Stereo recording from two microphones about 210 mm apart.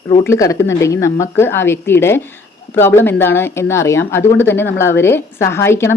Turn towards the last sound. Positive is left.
turn(degrees=10)  # may be behind; listen again after turning